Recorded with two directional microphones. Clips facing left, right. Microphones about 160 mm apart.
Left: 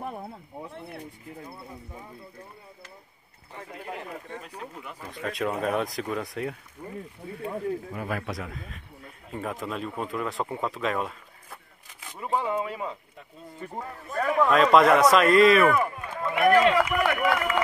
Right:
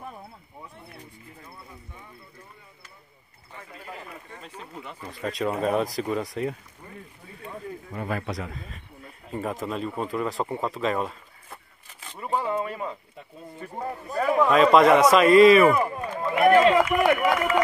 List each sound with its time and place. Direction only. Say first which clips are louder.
0.7 s a sound: left 6 dB; 70° left (ahead or behind)
1.4 s speech: left 4 dB; 30° left (ahead or behind)
4.4 s speech: left 1 dB; 5° left (ahead or behind)
14.1 s speech: right 2 dB; 5° right (ahead or behind)
15.7 s a man's voice: right 2 dB; 35° right (ahead or behind)